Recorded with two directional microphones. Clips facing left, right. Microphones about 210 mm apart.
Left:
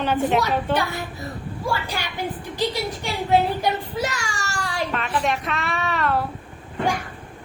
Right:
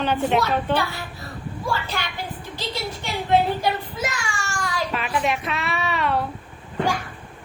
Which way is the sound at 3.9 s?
40° left (ahead or behind).